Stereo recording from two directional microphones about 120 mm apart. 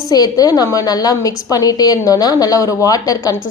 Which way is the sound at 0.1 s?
30° left (ahead or behind).